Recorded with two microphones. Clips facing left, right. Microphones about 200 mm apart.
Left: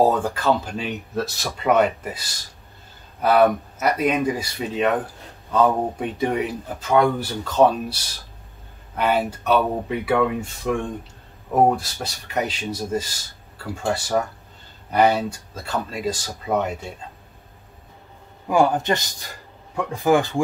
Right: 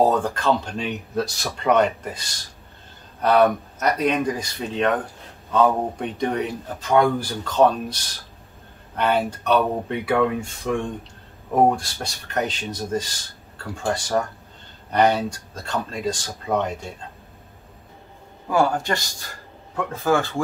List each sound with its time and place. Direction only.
0.0 s speech: 10° left (ahead or behind)
18.5 s speech: 20° left (ahead or behind)